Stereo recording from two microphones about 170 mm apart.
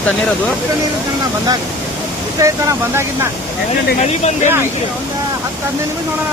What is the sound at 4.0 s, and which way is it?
Speech, 40° left (ahead or behind).